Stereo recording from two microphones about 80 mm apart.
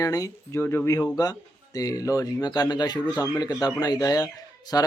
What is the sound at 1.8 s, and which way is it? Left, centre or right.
Speech, left.